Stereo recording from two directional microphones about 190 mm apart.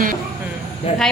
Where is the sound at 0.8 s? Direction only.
30° left (ahead or behind).